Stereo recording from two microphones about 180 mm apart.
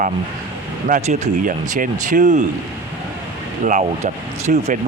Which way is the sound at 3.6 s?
45° right (ahead or behind).